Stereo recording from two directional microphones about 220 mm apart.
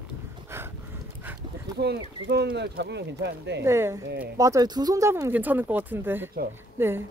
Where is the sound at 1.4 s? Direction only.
20° right (ahead or behind).